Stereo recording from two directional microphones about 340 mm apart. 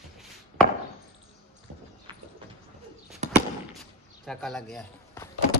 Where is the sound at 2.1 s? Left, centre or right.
Centre.